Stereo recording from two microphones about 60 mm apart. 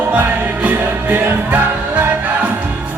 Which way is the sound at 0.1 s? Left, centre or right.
Right.